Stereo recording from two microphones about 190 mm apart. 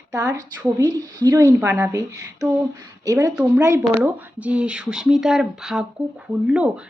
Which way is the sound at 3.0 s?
15° right (ahead or behind).